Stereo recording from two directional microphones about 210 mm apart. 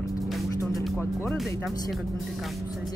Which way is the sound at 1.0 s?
10° left (ahead or behind).